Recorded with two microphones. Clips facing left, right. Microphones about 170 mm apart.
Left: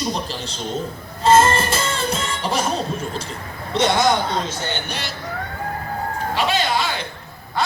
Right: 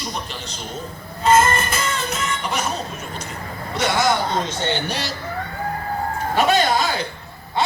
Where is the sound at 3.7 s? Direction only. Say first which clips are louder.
Left 2 dB; 20° left (ahead or behind).